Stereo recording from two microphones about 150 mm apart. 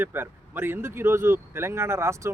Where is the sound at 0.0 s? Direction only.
15° right (ahead or behind).